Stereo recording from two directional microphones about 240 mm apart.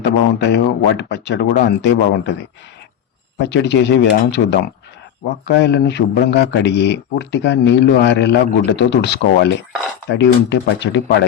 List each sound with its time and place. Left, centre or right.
0.0 s a man's voice: left
3.3 s a man's voice: left